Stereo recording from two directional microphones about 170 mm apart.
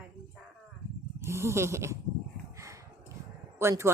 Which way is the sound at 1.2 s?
15° right (ahead or behind).